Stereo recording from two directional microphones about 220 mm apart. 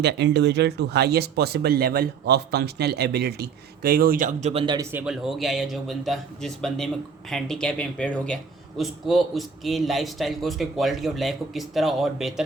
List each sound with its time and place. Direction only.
0.0 s a man's voice: 50° right (ahead or behind); by 12.3 s centre (ahead or behind)